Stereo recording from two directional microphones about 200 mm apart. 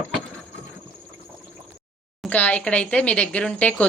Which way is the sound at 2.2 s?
5° left (ahead or behind).